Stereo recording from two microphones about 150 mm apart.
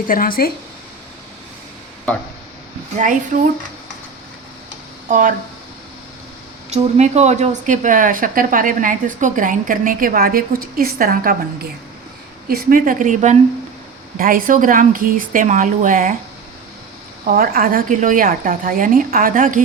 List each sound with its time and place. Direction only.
0.1 s speech: 75° left (ahead or behind)
3.0 s a woman's voice: 55° right (ahead or behind)
5.0 s speech: 60° right (ahead or behind)
6.7 s a woman's voice: 45° right (ahead or behind); by 11.3 s 75° right (ahead or behind)
12.5 s a woman's voice: 75° right (ahead or behind); by 13.3 s 55° right (ahead or behind)
14.2 s a woman's voice: 70° right (ahead or behind)
17.2 s a woman's voice: 75° right (ahead or behind)